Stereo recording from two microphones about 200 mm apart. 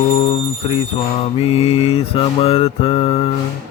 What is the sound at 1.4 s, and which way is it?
Mantra, 30° left (ahead or behind).